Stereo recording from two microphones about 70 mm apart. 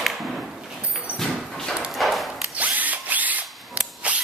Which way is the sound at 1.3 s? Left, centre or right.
Centre.